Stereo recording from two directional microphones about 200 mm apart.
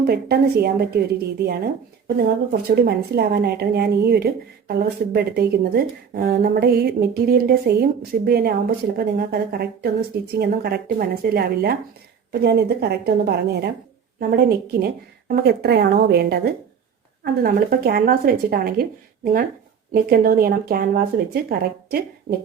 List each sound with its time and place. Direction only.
0.0 s speech: 50° right (ahead or behind)
17.4 s speech: 50° right (ahead or behind)